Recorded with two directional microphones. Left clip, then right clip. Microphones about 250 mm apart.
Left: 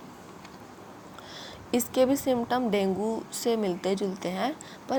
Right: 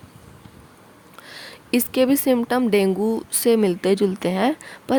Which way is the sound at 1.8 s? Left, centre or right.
Right.